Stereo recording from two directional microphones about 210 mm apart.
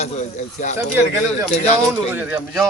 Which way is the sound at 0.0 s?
35° left (ahead or behind).